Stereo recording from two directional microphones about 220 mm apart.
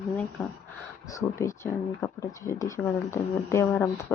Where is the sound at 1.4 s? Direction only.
10° left (ahead or behind).